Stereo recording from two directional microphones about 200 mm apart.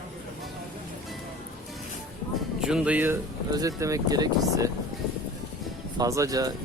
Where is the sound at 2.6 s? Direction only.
5° right (ahead or behind).